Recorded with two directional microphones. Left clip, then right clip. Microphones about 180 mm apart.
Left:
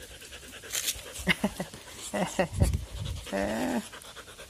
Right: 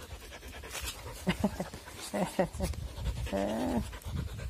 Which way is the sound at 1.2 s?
5° right (ahead or behind).